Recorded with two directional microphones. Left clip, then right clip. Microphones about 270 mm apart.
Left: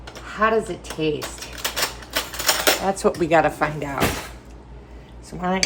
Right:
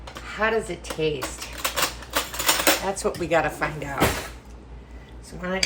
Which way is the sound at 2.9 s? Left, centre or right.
Centre.